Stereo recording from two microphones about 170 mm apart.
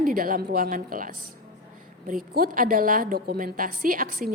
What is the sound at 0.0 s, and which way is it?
A woman's voice, 55° right (ahead or behind).